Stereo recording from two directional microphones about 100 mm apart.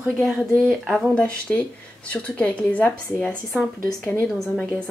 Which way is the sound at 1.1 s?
15° left (ahead or behind).